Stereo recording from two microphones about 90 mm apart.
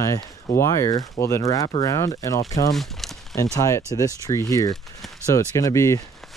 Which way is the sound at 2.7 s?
Centre (ahead or behind).